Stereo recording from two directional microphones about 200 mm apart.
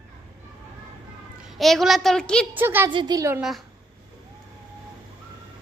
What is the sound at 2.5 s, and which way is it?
Speech, 10° right (ahead or behind).